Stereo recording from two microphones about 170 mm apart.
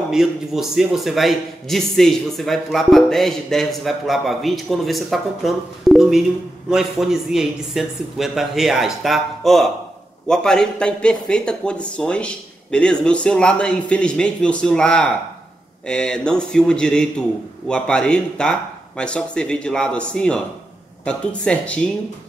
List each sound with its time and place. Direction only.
0.1 s a man's voice: centre (ahead or behind)